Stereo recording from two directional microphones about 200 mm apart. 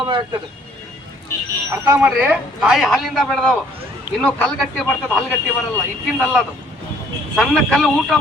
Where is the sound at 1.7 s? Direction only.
15° right (ahead or behind); by 5.2 s 5° left (ahead or behind).